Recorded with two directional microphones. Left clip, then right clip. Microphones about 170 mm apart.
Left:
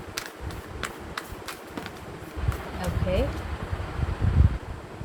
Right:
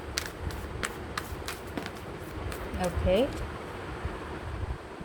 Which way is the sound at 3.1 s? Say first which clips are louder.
Right 2 dB; 50° right (ahead or behind).